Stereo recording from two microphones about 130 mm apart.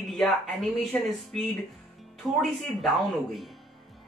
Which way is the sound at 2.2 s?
5° right (ahead or behind).